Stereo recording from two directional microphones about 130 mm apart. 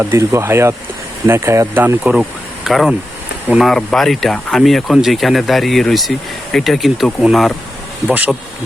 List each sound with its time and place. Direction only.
0.0 s speech: 20° right (ahead or behind); by 7.5 s centre (ahead or behind)
8.0 s speech: 10° right (ahead or behind)